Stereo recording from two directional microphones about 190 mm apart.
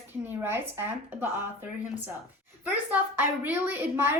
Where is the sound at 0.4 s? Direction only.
10° right (ahead or behind).